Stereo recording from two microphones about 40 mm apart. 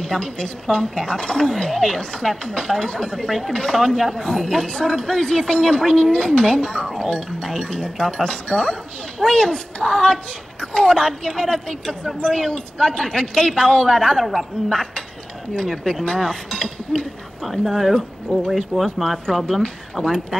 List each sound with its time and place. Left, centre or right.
0.0 s speech: centre
3.3 s a woman's voice: centre
15.5 s speech: centre
17.5 s a woman's voice: centre
17.9 s speech: centre